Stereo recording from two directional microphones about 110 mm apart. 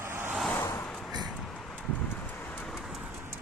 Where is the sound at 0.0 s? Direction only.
20° right (ahead or behind).